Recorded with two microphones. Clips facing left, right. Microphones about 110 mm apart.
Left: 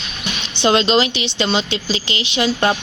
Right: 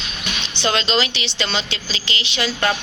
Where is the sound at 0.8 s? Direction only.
45° left (ahead or behind).